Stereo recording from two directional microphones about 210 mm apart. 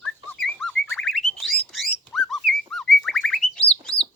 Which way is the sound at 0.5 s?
5° left (ahead or behind).